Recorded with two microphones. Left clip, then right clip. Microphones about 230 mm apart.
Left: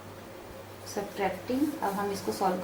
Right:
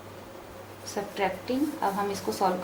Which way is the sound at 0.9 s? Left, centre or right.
Centre.